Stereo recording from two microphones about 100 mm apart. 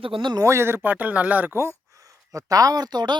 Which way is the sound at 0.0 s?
60° right (ahead or behind).